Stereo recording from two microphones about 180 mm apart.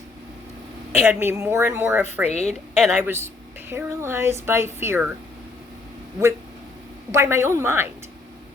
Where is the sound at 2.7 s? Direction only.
Centre (ahead or behind).